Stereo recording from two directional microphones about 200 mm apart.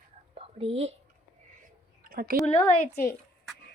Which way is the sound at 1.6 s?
45° right (ahead or behind).